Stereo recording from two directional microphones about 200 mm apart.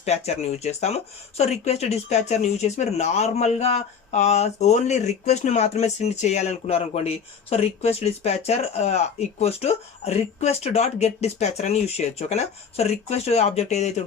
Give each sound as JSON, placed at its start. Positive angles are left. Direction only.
{"t": 0.0, "sound": "speech", "side_deg": 35}